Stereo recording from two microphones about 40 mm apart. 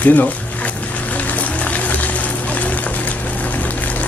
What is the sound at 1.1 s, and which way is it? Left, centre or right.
Music, left.